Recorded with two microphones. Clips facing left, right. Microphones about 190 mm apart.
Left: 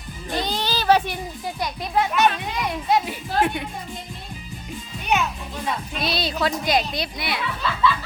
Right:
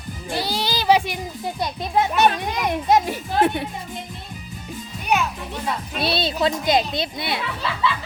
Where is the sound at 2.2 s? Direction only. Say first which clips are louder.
Right 2 dB; 45° right (ahead or behind).